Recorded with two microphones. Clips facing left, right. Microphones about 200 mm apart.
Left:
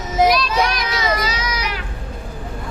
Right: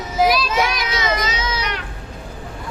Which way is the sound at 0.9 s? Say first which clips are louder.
Left 1 dB; 25° right (ahead or behind).